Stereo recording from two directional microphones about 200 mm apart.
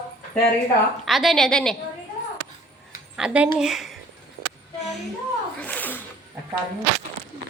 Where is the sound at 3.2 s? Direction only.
5° right (ahead or behind).